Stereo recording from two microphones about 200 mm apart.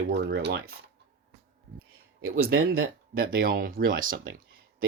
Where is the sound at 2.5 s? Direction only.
90° right.